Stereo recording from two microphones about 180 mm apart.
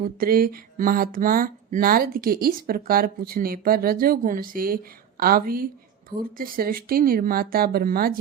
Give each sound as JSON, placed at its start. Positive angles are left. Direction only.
{"t": 0.0, "sound": "speech", "side_deg": -55}